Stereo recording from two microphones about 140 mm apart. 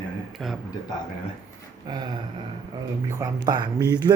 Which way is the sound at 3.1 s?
25° right (ahead or behind).